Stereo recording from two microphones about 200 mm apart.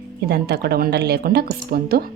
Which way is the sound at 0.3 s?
55° right (ahead or behind).